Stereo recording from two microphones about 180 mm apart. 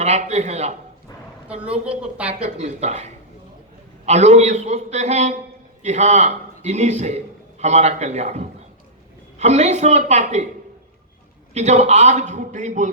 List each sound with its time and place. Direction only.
0.0 s a man's voice: 40° right (ahead or behind)
1.5 s a woman's voice: 5° right (ahead or behind)
2.6 s a man's voice: 40° right (ahead or behind)
11.5 s a man's voice: 40° right (ahead or behind)